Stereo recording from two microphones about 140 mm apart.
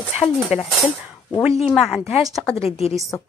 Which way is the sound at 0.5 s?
10° right (ahead or behind).